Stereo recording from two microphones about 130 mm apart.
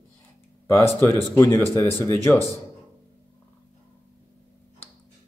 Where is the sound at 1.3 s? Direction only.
20° left (ahead or behind).